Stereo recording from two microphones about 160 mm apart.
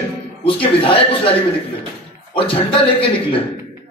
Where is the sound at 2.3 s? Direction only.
35° left (ahead or behind).